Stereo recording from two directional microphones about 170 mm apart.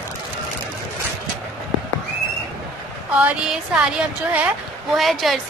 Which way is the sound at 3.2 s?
5° right (ahead or behind).